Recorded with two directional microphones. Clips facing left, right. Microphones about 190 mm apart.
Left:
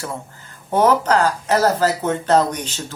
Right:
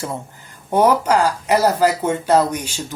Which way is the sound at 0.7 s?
10° right (ahead or behind).